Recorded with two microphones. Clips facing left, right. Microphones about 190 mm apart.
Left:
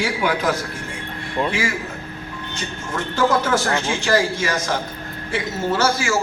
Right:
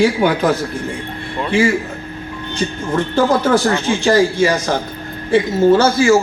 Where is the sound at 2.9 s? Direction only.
30° right (ahead or behind).